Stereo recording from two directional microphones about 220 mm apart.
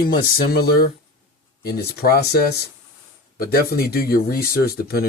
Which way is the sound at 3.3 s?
45° left (ahead or behind).